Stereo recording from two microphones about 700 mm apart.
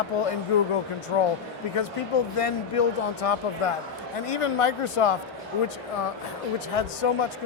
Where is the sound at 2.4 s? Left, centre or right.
Left.